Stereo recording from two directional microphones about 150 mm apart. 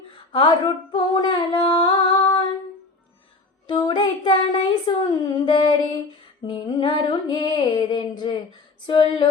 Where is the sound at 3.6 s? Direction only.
30° left (ahead or behind).